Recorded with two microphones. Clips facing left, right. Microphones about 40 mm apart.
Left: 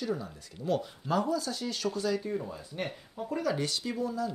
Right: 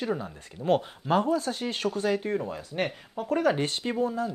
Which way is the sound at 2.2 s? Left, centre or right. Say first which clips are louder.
Right 5 dB; right.